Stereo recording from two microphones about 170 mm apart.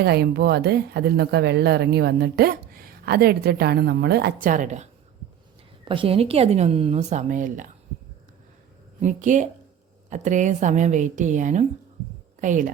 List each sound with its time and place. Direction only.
0.0 s speech: 70° right (ahead or behind); by 4.9 s 45° right (ahead or behind)
5.8 s a woman's voice: 30° right (ahead or behind); by 7.7 s 50° right (ahead or behind)
9.0 s a woman's voice: 45° right (ahead or behind)